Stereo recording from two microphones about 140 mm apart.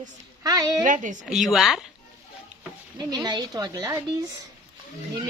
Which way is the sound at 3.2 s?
30° right (ahead or behind).